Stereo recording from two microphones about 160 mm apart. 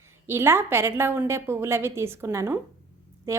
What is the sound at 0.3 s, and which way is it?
A woman's voice, 15° right (ahead or behind).